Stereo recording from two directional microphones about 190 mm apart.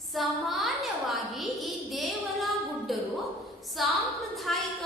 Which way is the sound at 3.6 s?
Centre (ahead or behind).